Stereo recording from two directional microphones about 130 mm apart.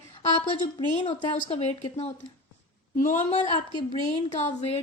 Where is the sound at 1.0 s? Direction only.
50° left (ahead or behind).